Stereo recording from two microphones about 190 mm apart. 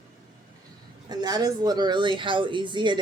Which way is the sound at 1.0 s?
20° right (ahead or behind).